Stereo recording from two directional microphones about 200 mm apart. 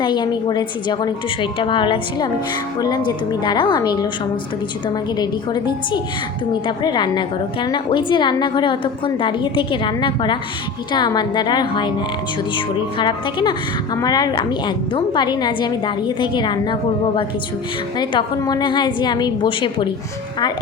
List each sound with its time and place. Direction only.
0.0 s a woman's voice: 20° left (ahead or behind)
5.1 s a woman's voice: 20° left (ahead or behind)
17.9 s a woman's voice: 20° left (ahead or behind)